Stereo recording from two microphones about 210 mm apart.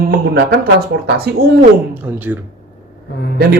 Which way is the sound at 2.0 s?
10° right (ahead or behind).